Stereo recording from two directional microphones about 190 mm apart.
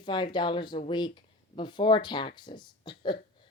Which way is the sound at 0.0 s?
25° left (ahead or behind).